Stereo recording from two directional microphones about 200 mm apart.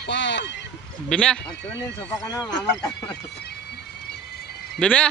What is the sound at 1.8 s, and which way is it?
Speech, 20° left (ahead or behind).